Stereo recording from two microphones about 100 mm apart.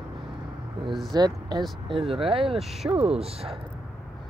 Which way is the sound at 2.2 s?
65° right (ahead or behind).